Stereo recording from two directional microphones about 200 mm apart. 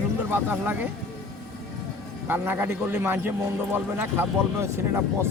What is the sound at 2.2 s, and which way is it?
A man's voice, 10° right (ahead or behind).